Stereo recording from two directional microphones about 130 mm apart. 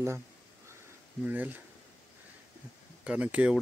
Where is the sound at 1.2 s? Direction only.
15° right (ahead or behind).